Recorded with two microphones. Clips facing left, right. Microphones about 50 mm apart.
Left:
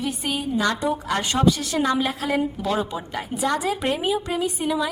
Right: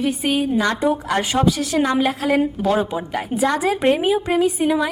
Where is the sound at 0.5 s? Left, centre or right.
Right.